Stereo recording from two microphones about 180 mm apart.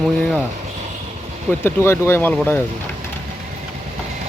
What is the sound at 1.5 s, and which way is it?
Speech, 10° left (ahead or behind).